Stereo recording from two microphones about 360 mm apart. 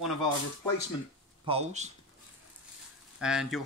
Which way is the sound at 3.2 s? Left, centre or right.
Centre.